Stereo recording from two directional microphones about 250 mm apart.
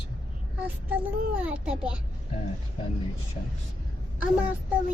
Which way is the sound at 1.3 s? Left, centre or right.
Centre.